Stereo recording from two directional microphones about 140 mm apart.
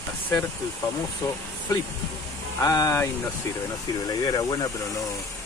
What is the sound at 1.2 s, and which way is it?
Speech, 25° left (ahead or behind).